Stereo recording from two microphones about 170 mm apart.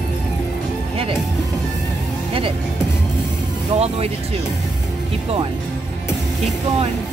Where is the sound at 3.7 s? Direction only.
35° right (ahead or behind).